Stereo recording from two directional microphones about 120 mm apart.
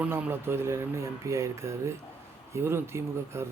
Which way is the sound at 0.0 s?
15° right (ahead or behind).